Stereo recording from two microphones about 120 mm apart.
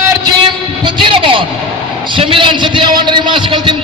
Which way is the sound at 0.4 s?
45° right (ahead or behind).